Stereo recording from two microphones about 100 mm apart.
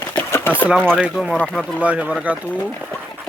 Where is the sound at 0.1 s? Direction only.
20° left (ahead or behind).